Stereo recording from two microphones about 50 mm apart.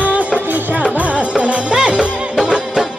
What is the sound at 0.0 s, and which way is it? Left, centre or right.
Music, right.